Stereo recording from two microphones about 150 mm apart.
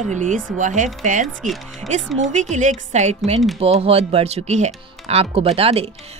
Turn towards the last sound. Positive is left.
turn(degrees=-40)  # may be behind; listen again after turning